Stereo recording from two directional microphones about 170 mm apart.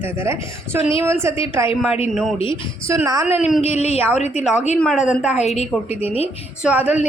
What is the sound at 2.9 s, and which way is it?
Speech, 20° right (ahead or behind).